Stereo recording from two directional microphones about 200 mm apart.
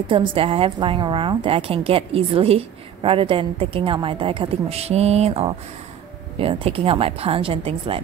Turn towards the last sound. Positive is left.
turn(degrees=-25)  # may be behind; listen again after turning